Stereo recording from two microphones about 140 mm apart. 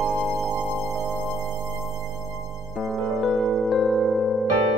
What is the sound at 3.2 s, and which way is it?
Music, centre (ahead or behind).